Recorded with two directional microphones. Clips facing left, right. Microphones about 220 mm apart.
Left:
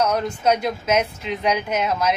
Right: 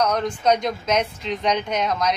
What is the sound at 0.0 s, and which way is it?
Speech, 5° left (ahead or behind).